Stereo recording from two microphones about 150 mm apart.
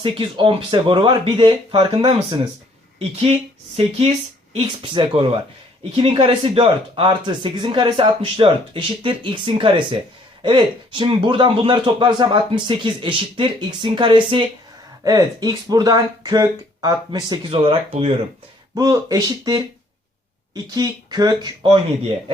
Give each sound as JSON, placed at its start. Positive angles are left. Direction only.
{"t": 0.0, "sound": "speech", "side_deg": -35}
{"t": 18.7, "sound": "speech", "side_deg": -25}